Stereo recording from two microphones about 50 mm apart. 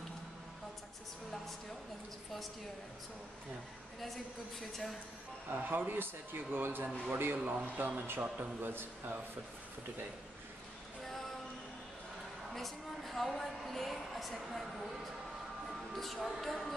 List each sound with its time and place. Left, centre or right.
4.0 s a woman's voice: centre
5.5 s speech: right
7.5 s a man's voice: right
11.0 s music: centre
12.5 s a woman's voice: centre
15.9 s a woman's voice: centre